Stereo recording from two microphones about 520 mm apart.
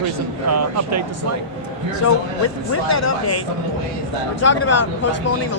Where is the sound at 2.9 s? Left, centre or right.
Left.